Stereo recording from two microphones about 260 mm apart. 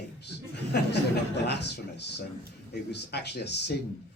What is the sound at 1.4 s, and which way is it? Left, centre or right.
A man's voice, left.